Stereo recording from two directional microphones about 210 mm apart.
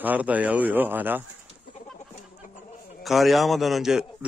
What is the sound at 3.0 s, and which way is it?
A man's voice, centre (ahead or behind).